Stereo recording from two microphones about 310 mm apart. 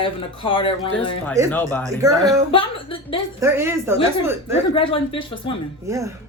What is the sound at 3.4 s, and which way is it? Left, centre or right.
Speech, centre.